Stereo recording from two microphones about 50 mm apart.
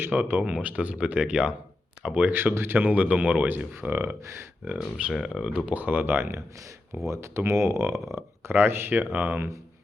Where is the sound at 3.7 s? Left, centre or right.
Right.